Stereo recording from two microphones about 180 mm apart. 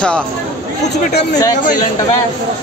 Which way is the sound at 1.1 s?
65° left (ahead or behind).